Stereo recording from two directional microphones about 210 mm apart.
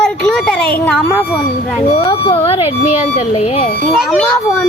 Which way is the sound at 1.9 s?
25° left (ahead or behind).